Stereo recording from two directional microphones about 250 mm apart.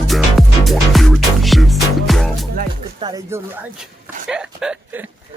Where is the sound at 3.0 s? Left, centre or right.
Centre.